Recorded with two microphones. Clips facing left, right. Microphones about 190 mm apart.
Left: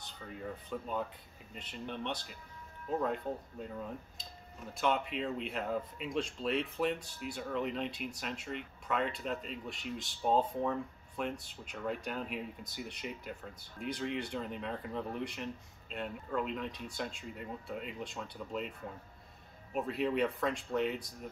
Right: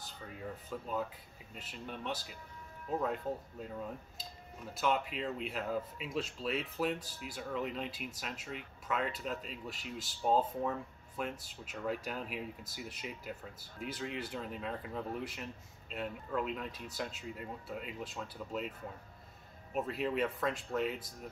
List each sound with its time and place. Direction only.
0.0 s speech: 5° right (ahead or behind)
4.7 s speech: centre (ahead or behind)
19.7 s speech: centre (ahead or behind)